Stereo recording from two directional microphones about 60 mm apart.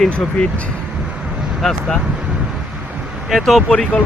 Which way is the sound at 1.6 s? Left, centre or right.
Centre.